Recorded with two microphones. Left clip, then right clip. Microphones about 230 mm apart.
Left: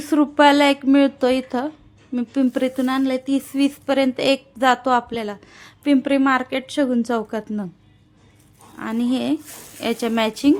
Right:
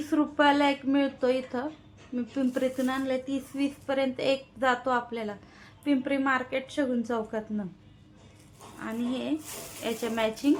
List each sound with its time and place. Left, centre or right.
0.0 s speech: left
8.8 s speech: left